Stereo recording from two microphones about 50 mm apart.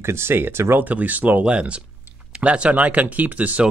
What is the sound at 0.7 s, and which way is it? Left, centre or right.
Speech, right.